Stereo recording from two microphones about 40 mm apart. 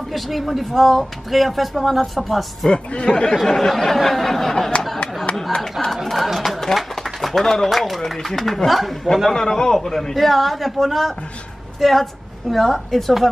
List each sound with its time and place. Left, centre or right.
0.1 s speech: centre
2.7 s a man's voice: left
3.4 s speech: centre
5.3 s a sound: left
6.0 s a sound: centre
7.4 s a man's voice: centre
7.7 s speech: centre